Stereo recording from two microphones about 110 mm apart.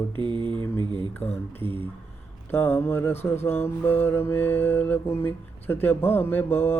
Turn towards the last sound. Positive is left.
turn(degrees=20)  # may be behind; listen again after turning